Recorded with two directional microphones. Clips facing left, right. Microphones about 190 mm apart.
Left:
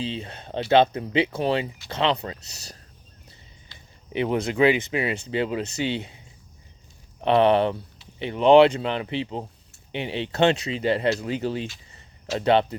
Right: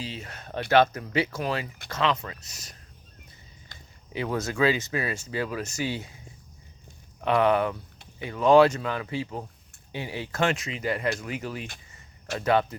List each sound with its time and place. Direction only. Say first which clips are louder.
0.0 s speech: left 6 dB; 25° left (ahead or behind)
4.1 s speech: left 5 dB; 25° left (ahead or behind)